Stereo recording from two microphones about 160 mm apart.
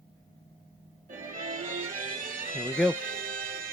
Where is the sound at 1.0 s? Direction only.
55° right (ahead or behind).